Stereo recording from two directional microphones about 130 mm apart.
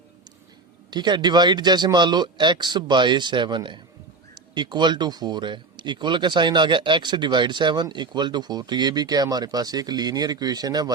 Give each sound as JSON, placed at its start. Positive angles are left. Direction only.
{"t": 0.9, "sound": "speech", "side_deg": -35}